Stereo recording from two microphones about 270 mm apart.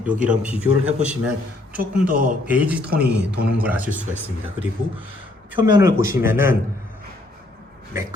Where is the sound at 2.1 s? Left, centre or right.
Right.